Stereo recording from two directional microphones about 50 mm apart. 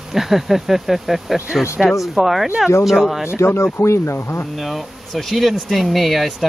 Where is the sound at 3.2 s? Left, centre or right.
Left.